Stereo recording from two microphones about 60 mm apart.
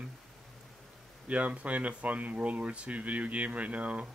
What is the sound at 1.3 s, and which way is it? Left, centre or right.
Speech, right.